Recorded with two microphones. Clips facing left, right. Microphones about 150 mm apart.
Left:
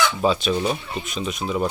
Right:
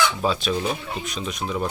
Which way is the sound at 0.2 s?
Centre (ahead or behind).